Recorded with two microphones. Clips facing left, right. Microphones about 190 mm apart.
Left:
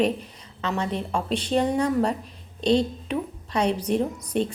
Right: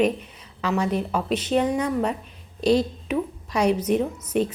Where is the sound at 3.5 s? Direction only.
30° left (ahead or behind).